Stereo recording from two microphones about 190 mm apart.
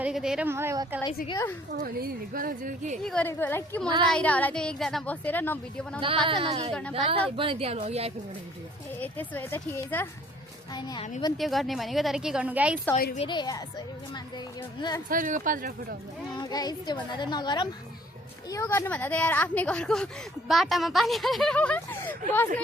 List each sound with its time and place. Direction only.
0.0 s speech: 5° right (ahead or behind)
1.3 s a woman's voice: 15° left (ahead or behind)
2.0 s speech: 50° right (ahead or behind)
3.0 s a woman's voice: 5° left (ahead or behind)
6.2 s a woman's voice: 30° right (ahead or behind)
9.0 s a woman's voice: 10° left (ahead or behind)
10.8 s a woman's voice: 25° left (ahead or behind)
11.3 s a woman's voice: centre (ahead or behind)
13.1 s a woman's voice: 25° left (ahead or behind)
15.1 s speech: 45° right (ahead or behind)
16.3 s a woman's voice: 20° left (ahead or behind)